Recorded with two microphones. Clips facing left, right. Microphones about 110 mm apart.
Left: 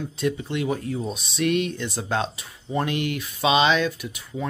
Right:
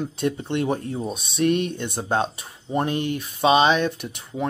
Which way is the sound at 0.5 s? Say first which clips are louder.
Right 2 dB; 40° right (ahead or behind).